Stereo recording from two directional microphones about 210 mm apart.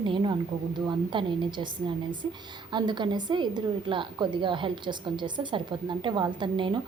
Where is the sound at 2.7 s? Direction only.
20° right (ahead or behind).